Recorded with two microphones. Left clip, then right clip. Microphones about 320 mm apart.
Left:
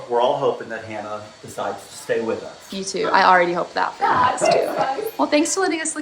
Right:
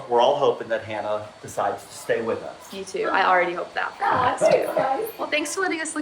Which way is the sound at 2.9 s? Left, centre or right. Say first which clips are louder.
Left 5 dB; centre.